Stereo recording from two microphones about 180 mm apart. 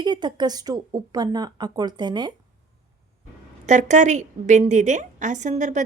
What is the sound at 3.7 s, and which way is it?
A woman's voice, 40° right (ahead or behind).